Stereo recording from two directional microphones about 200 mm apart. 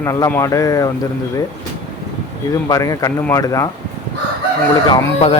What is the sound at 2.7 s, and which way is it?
Speech, 15° left (ahead or behind).